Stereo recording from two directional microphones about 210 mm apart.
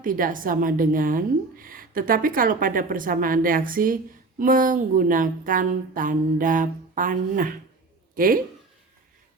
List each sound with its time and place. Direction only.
0.0 s a woman's voice: 40° right (ahead or behind)